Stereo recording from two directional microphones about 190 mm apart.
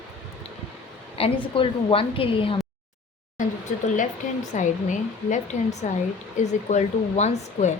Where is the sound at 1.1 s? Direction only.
30° left (ahead or behind).